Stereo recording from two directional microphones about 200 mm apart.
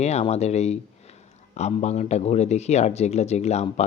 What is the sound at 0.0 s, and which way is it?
Speech, 35° left (ahead or behind).